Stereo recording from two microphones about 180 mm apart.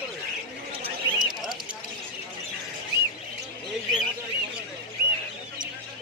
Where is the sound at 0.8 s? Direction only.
25° right (ahead or behind).